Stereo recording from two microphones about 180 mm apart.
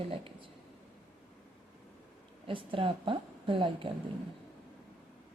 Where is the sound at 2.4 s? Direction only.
30° right (ahead or behind).